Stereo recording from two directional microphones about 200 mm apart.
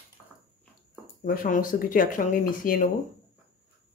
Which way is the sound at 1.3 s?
40° left (ahead or behind).